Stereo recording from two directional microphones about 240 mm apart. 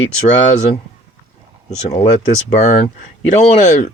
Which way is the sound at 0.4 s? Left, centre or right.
Left.